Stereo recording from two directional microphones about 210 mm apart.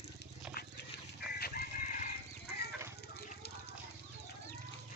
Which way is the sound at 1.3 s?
45° left (ahead or behind).